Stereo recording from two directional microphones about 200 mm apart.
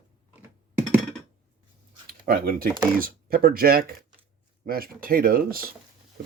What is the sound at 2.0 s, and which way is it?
Speech, 50° right (ahead or behind).